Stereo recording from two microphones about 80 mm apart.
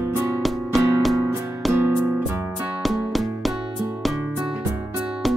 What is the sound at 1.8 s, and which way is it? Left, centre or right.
Music, right.